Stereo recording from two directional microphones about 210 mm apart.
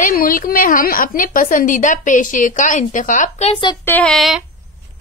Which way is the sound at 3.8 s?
5° left (ahead or behind).